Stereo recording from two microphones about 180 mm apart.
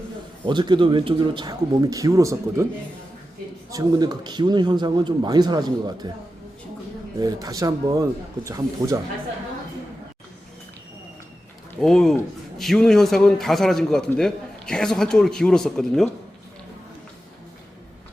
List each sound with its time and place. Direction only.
0.4 s speech: 25° right (ahead or behind)
3.7 s speech: 20° right (ahead or behind)
7.2 s speech: 20° right (ahead or behind)
11.8 s a man's voice: centre (ahead or behind)